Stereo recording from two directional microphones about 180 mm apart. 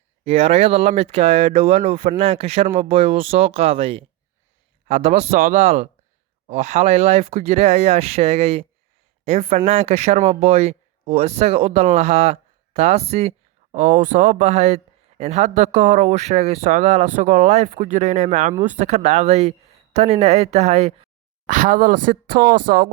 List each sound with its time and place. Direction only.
0.3 s a woman's voice: 35° right (ahead or behind); by 22.8 s 55° right (ahead or behind)